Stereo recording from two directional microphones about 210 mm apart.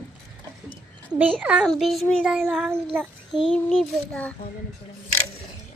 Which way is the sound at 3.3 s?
Centre (ahead or behind).